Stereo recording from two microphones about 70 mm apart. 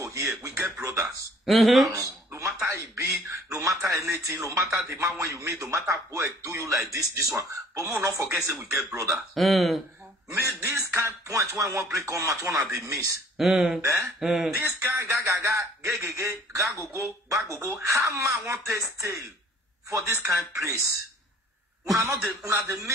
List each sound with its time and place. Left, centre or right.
0.0 s speech: right
1.4 s speech: centre
1.9 s a sound: right
3.0 s speech: right
9.1 s speech: centre
10.3 s speech: right
13.4 s speech: centre
13.7 s speech: right
14.2 s speech: centre
14.6 s speech: right
21.9 s speech: right